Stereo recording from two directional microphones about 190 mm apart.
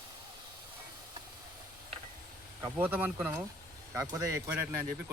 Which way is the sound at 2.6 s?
10° right (ahead or behind).